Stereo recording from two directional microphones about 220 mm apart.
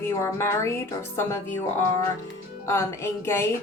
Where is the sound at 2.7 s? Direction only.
10° left (ahead or behind).